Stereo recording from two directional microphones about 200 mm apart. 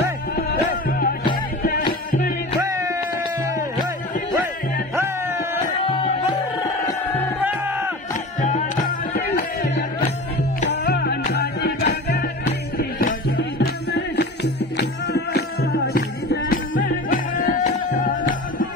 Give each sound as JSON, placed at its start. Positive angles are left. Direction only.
{"t": 0.4, "sound": "music", "side_deg": 50}
{"t": 4.9, "sound": "music", "side_deg": -15}
{"t": 5.8, "sound": "music", "side_deg": 30}
{"t": 6.6, "sound": "music", "side_deg": 10}
{"t": 7.4, "sound": "music", "side_deg": -10}
{"t": 8.4, "sound": "music", "side_deg": 40}
{"t": 10.7, "sound": "music", "side_deg": 60}
{"t": 16.7, "sound": "music", "side_deg": 65}
{"t": 17.1, "sound": "music", "side_deg": 45}